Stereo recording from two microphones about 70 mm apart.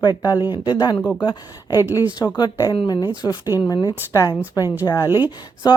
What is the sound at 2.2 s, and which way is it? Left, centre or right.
A woman's voice, left.